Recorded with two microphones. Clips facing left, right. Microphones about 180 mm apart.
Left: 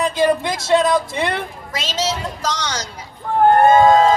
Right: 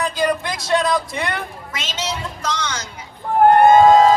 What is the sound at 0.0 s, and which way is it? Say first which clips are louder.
Speech: left 4 dB; 25° left (ahead or behind).